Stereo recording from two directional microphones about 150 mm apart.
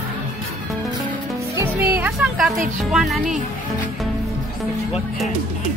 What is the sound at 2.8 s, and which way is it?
Speech, centre (ahead or behind).